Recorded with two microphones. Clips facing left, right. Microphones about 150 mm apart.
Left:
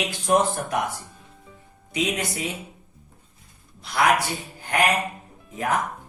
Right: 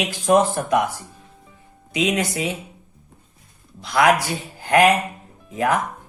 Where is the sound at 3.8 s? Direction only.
90° right.